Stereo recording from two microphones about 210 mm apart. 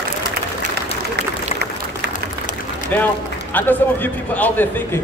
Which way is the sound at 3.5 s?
10° left (ahead or behind).